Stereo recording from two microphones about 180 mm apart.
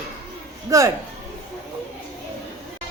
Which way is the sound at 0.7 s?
20° right (ahead or behind).